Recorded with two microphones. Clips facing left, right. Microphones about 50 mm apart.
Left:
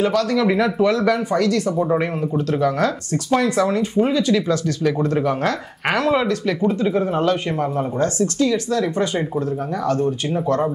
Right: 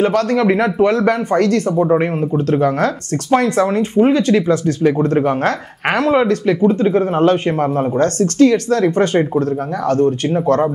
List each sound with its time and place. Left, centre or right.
0.0 s speech: right
2.0 s speech: right